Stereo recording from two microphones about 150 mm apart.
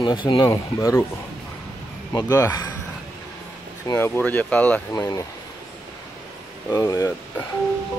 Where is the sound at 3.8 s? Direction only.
15° left (ahead or behind).